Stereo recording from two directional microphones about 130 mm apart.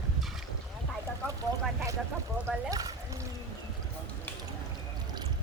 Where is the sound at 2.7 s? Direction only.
25° right (ahead or behind).